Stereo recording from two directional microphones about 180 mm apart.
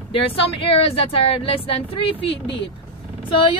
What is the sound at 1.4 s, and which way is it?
A woman's voice, 30° left (ahead or behind).